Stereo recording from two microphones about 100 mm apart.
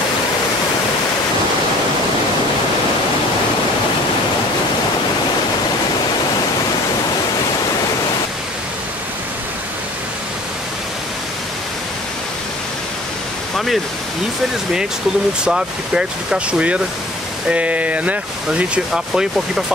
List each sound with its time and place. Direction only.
15.4 s speech: 10° right (ahead or behind)